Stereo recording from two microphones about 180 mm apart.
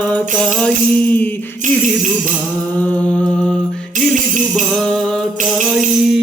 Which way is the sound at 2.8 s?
5° left (ahead or behind).